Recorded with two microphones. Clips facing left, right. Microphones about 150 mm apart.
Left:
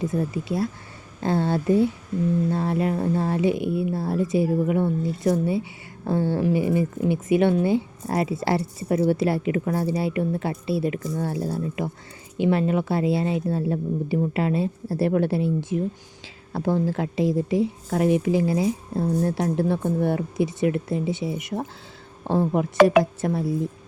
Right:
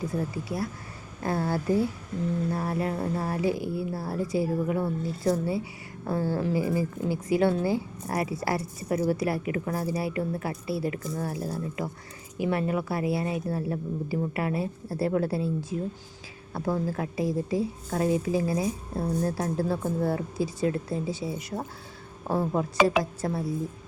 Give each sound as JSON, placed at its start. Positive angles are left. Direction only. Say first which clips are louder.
{"t": 0.0, "sound": "a woman's voice", "louder": "left 5 dB", "side_deg": 20}
{"t": 16.5, "sound": "a woman's voice", "louder": "left 5 dB", "side_deg": 30}
{"t": 22.8, "sound": "speech", "louder": "left 8 dB", "side_deg": 0}
{"t": 23.2, "sound": "a woman's voice", "louder": "left 5 dB", "side_deg": 25}